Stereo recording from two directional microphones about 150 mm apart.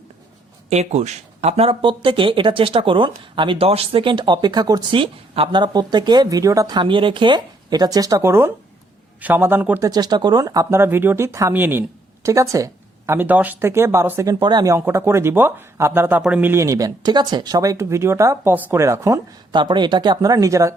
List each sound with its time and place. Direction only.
0.7 s a man's voice: 50° right (ahead or behind); by 9.8 s 10° right (ahead or behind)
9.8 s speech: 25° right (ahead or behind)